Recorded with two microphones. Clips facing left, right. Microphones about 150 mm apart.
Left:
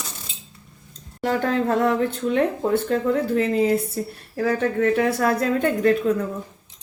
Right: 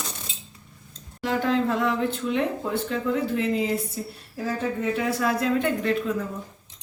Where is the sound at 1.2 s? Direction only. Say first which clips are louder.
Left 2 dB; 45° left (ahead or behind).